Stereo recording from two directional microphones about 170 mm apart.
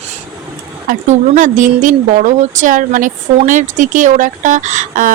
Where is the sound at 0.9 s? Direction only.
50° right (ahead or behind).